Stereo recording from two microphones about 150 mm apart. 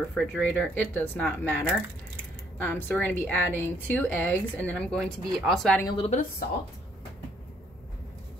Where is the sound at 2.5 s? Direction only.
15° left (ahead or behind).